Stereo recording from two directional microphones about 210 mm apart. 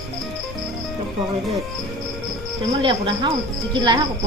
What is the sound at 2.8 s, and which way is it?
Speech, 25° right (ahead or behind).